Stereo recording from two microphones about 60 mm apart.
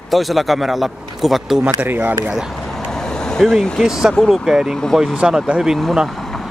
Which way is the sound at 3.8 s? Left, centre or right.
Centre.